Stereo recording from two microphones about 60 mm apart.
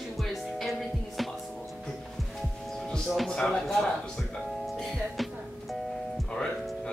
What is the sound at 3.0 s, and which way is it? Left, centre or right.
Speech, centre.